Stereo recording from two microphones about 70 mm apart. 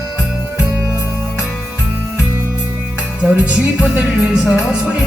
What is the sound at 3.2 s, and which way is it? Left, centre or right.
Music, centre.